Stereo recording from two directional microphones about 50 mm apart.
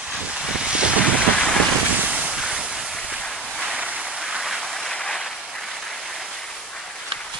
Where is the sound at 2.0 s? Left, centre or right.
Right; by 4.9 s centre.